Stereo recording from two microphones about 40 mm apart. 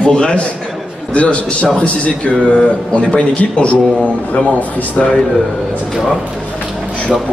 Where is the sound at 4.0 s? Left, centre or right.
Left.